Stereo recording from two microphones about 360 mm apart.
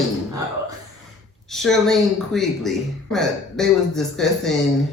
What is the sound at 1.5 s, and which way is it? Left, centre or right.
Speech, centre.